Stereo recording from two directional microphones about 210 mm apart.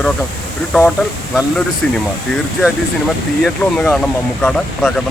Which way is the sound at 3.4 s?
5° left (ahead or behind).